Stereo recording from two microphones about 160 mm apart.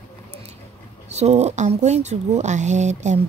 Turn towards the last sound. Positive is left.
turn(degrees=-45)  # may be behind; listen again after turning